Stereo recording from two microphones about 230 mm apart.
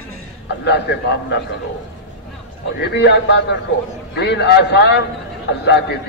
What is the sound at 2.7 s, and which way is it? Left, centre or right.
A man's voice, left.